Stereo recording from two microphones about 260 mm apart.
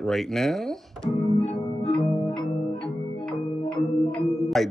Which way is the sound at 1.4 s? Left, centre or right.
Left.